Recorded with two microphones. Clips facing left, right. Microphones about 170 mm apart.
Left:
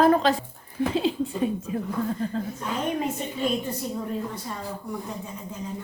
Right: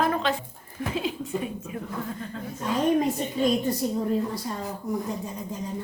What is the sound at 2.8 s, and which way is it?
Speech, 35° right (ahead or behind).